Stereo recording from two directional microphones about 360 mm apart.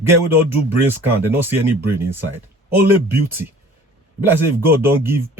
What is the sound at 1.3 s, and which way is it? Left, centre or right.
Speech, centre.